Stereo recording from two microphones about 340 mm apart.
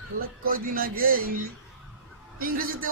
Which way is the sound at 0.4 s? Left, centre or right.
Right.